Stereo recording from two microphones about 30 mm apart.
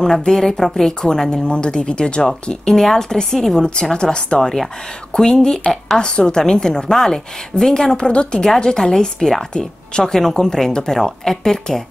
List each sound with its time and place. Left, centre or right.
0.3 s speech: centre
1.4 s a woman's voice: left
2.7 s speech: centre
3.5 s a woman's voice: left
4.4 s speech: centre
5.1 s a woman's voice: left
8.1 s speech: left
8.5 s a woman's voice: left
10.4 s speech: centre